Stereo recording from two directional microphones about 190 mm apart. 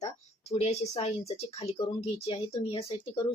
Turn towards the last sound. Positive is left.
turn(degrees=30)  # may be behind; listen again after turning